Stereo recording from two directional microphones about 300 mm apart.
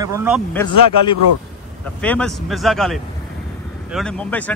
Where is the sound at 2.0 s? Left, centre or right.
Centre.